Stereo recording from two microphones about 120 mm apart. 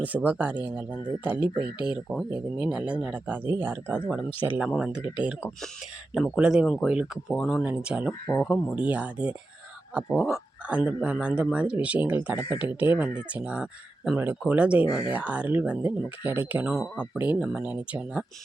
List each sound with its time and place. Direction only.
0.0 s speech: 15° right (ahead or behind)
7.3 s speech: 5° left (ahead or behind)
7.6 s speech: 10° right (ahead or behind)
10.7 s speech: 10° right (ahead or behind)
16.7 s speech: centre (ahead or behind)